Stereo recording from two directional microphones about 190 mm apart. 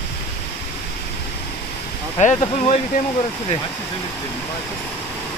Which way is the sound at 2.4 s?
35° left (ahead or behind).